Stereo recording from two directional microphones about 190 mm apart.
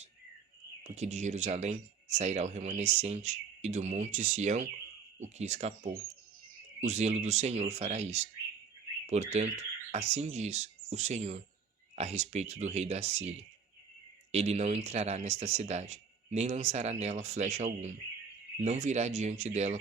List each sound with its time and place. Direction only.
0.9 s speech: 35° right (ahead or behind)
14.3 s speech: 35° right (ahead or behind)